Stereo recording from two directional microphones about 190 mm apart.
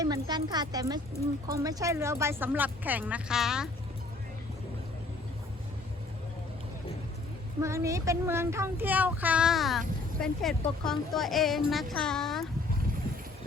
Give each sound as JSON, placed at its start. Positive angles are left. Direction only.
{"t": 0.0, "sound": "a woman's voice", "side_deg": -20}
{"t": 7.6, "sound": "speech", "side_deg": -15}